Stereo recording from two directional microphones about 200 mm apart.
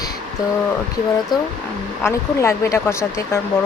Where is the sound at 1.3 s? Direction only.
20° left (ahead or behind).